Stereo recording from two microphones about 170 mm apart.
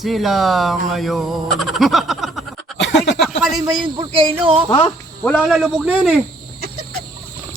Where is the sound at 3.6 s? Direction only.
25° right (ahead or behind).